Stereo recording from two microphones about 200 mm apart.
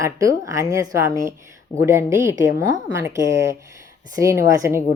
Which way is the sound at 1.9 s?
15° right (ahead or behind).